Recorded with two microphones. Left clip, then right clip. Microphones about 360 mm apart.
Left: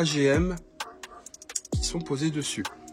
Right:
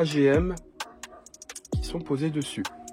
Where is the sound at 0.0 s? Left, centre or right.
Centre.